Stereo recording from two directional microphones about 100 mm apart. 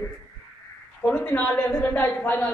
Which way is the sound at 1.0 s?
15° left (ahead or behind).